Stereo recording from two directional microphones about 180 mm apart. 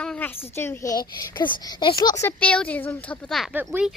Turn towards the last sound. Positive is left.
turn(degrees=-10)  # may be behind; listen again after turning